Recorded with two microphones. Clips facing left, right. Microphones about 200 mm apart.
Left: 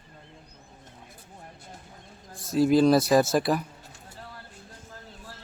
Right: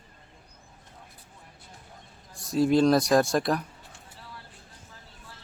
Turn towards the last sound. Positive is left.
turn(degrees=5)  # may be behind; listen again after turning